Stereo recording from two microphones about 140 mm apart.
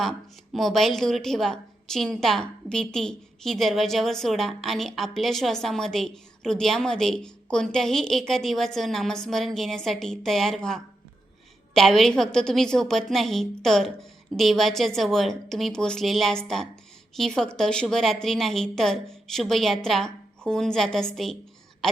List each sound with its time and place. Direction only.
0.0 s a woman's voice: centre (ahead or behind)